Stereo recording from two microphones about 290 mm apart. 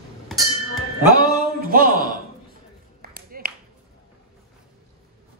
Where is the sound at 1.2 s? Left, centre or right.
Right.